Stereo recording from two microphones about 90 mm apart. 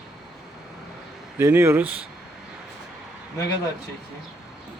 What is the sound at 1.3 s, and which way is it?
Speech, 30° right (ahead or behind).